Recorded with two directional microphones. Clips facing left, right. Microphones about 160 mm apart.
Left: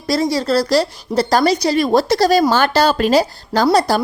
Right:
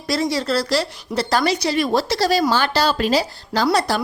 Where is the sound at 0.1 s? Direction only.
40° left (ahead or behind).